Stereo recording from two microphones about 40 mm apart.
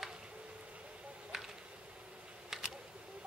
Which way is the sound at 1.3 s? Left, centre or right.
Centre.